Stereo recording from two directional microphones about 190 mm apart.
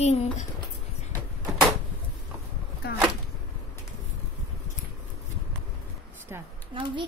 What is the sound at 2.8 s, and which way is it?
Speech, 55° left (ahead or behind).